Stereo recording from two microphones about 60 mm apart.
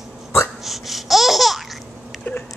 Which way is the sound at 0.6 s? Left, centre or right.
Centre.